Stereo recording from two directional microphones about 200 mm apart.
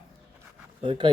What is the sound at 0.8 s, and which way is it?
Speech, 25° right (ahead or behind).